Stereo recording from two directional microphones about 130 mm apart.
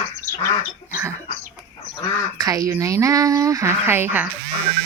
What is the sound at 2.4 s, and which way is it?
Speech, 25° right (ahead or behind).